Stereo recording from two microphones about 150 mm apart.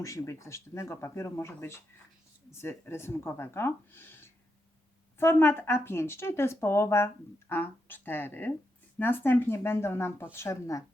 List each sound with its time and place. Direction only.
0.0 s speech: 20° left (ahead or behind)